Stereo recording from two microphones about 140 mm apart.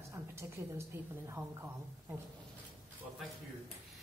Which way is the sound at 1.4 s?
20° right (ahead or behind).